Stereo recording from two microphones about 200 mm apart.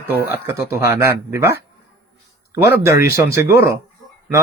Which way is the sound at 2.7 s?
15° right (ahead or behind).